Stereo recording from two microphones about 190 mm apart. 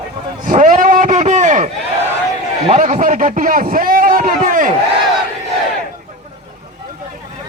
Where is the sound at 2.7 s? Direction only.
40° right (ahead or behind).